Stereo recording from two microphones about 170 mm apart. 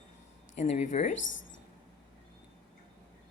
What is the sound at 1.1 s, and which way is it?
Speech, 90° left.